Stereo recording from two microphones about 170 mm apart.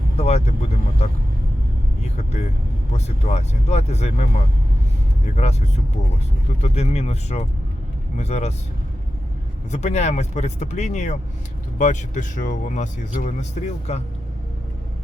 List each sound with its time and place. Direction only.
0.2 s speech: 40° left (ahead or behind)
2.1 s speech: 40° left (ahead or behind)
9.7 s speech: 40° left (ahead or behind)